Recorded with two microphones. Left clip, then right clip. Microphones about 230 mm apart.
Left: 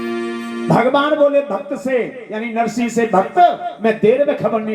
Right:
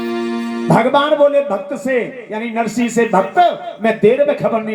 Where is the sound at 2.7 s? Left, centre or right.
Right.